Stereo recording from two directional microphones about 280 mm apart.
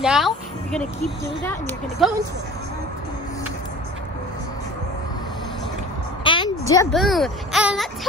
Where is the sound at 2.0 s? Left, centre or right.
Centre.